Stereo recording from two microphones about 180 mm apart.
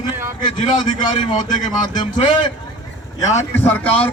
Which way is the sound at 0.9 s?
25° left (ahead or behind).